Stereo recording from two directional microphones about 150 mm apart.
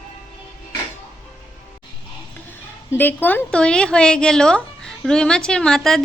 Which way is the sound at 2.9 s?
15° left (ahead or behind).